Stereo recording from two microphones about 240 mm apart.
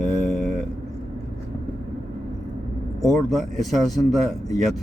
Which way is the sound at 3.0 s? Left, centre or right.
Centre.